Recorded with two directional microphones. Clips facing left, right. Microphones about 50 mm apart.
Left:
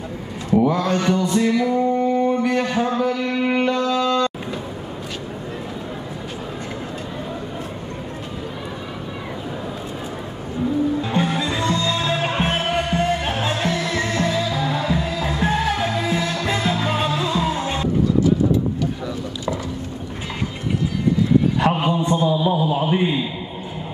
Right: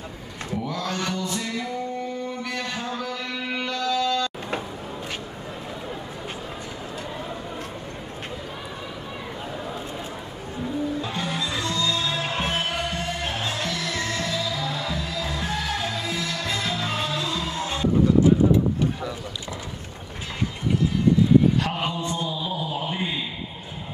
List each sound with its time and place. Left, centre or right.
0.7 s male singing: left
3.7 s music: left
11.0 s music: left
21.5 s a sound: left